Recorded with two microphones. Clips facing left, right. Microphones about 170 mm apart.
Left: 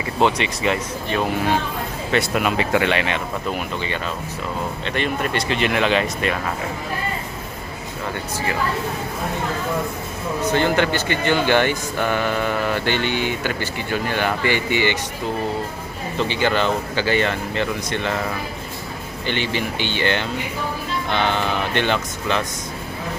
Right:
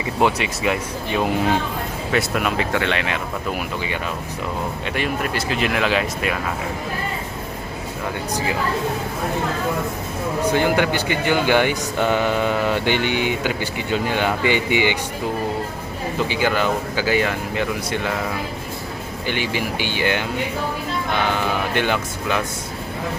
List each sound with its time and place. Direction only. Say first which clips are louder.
0.2 s speech: left 1 dB; 10° right (ahead or behind)
1.2 s speech: right 2 dB; 20° right (ahead or behind)
2.1 s speech: left 1 dB; centre (ahead or behind)
10.4 s speech: even; 10° right (ahead or behind)
16.1 s speech: left 1 dB; 10° right (ahead or behind)
19.3 s speech: even; 10° right (ahead or behind)